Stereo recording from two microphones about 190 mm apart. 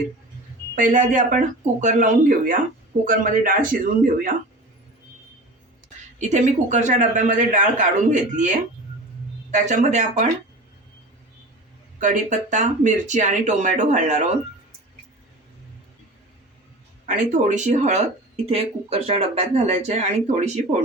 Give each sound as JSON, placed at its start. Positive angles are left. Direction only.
{"t": 0.8, "sound": "speech", "side_deg": -45}
{"t": 6.1, "sound": "speech", "side_deg": -40}
{"t": 11.9, "sound": "speech", "side_deg": -40}
{"t": 17.3, "sound": "speech", "side_deg": -40}